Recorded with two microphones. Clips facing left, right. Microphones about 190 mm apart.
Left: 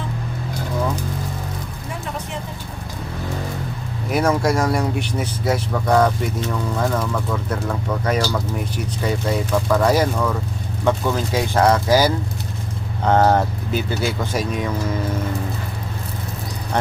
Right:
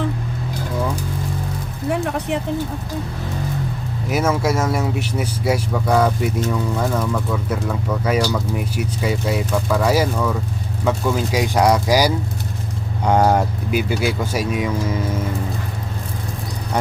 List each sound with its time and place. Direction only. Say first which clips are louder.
1.9 s music: right 9 dB; 65° right (ahead or behind)
4.1 s speech: left 1 dB; 5° right (ahead or behind)